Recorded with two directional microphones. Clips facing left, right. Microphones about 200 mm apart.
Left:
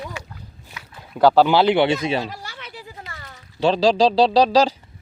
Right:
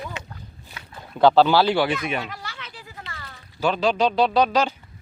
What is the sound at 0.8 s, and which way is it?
Boat, 30° right (ahead or behind).